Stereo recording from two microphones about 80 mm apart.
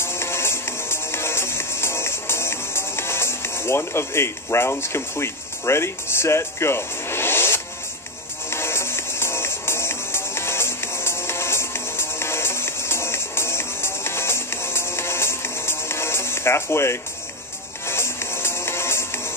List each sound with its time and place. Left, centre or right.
0.0 s music: left